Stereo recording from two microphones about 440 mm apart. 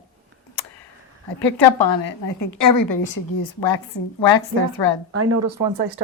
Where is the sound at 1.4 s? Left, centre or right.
Left.